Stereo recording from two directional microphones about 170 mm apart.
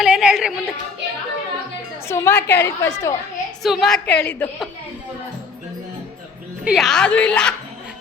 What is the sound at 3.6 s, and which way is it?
A woman's voice, centre (ahead or behind).